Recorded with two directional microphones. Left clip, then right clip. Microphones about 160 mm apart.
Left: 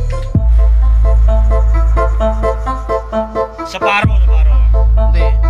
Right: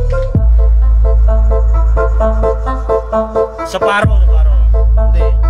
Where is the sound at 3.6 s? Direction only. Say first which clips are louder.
Left 1 dB; 90° right.